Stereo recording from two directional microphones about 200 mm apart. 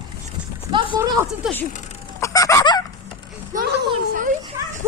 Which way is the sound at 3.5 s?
50° right (ahead or behind).